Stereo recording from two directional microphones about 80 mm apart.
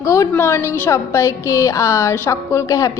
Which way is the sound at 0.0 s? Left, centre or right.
Left.